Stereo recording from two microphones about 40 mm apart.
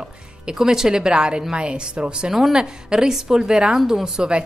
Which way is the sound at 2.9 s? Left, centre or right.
Centre.